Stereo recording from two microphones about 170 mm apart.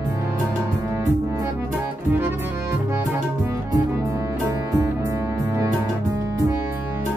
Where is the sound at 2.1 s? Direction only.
10° right (ahead or behind).